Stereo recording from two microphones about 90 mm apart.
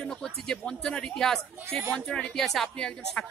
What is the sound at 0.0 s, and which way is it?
Speech, 5° left (ahead or behind).